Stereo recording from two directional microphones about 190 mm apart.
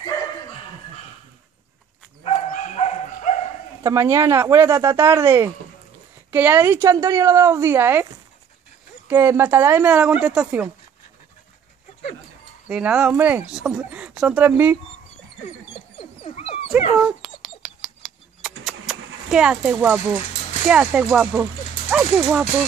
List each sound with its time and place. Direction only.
2.2 s dog: 35° left (ahead or behind)
3.8 s speech: 15° right (ahead or behind)
9.1 s speech: 15° right (ahead or behind)
12.6 s speech: 5° right (ahead or behind)
16.0 s dog: 30° left (ahead or behind)
17.0 s a sound: 5° right (ahead or behind)
20.6 s speech: 5° right (ahead or behind)